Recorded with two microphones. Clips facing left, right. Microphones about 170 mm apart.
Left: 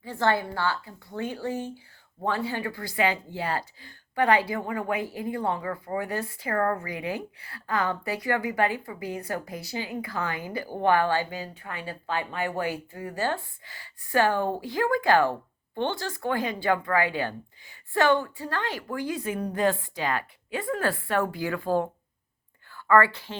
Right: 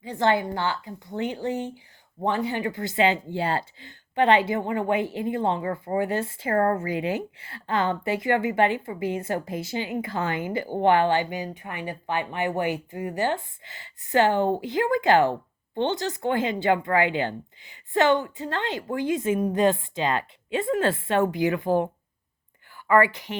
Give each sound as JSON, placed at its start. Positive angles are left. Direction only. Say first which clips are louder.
{"t": 0.0, "sound": "a woman's voice", "louder": "right 2 dB", "side_deg": -20}